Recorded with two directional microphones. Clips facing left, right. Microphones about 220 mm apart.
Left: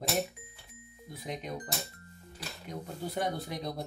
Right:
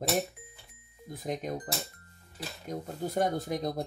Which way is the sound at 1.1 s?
45° right (ahead or behind).